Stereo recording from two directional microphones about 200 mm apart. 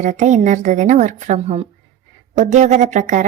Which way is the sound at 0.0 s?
35° right (ahead or behind).